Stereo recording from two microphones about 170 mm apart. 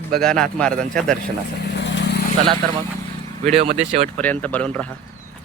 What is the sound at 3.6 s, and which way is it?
Speech, 40° right (ahead or behind).